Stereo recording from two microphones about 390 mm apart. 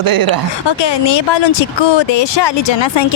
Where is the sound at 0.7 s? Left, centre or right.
Left.